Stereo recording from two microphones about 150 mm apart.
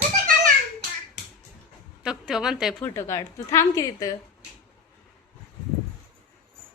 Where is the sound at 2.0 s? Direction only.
5° right (ahead or behind).